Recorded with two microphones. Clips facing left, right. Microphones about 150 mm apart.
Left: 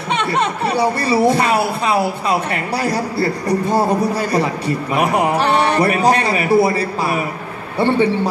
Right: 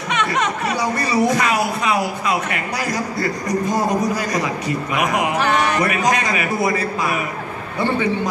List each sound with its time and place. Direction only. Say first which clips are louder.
0.1 s speech: left 2 dB; 30° left (ahead or behind)